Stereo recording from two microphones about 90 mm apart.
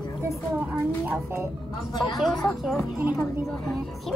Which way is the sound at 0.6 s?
20° right (ahead or behind).